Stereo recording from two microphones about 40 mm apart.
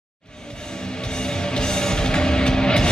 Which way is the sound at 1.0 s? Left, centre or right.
Centre.